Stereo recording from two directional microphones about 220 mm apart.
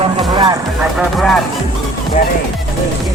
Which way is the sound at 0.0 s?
20° right (ahead or behind).